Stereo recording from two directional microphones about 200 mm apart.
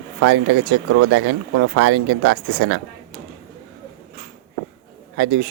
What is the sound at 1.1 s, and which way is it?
Speech, 90° right.